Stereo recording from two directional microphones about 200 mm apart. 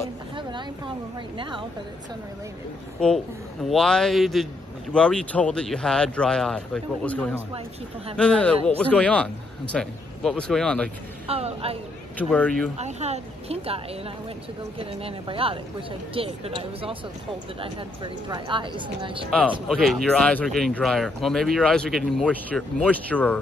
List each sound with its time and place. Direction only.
0.4 s vehicle: 25° right (ahead or behind)
1.4 s speech: 25° right (ahead or behind)
3.6 s speech: 5° left (ahead or behind)
11.2 s speech: 30° right (ahead or behind)
12.2 s speech: 5° left (ahead or behind)
12.7 s speech: 35° right (ahead or behind)
19.7 s speech: centre (ahead or behind)